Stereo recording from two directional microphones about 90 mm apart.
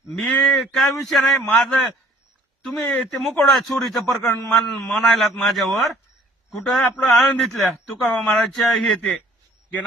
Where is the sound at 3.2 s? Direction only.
Centre (ahead or behind).